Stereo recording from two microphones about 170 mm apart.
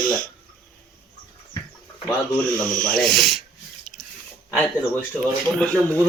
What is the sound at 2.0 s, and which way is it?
Speech, 5° left (ahead or behind).